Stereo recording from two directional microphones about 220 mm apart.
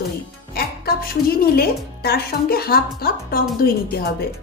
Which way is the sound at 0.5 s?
45° left (ahead or behind).